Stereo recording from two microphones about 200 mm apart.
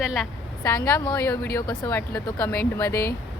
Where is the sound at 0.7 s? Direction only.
15° left (ahead or behind).